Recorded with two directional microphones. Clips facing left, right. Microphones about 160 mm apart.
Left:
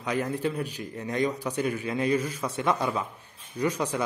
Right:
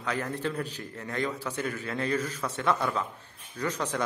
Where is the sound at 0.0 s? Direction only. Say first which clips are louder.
Left 3 dB; 15° left (ahead or behind).